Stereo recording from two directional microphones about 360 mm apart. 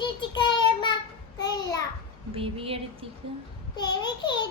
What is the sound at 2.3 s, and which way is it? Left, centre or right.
Speech, centre.